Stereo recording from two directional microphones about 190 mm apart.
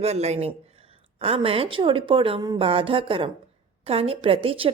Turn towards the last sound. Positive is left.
turn(degrees=-30)  # may be behind; listen again after turning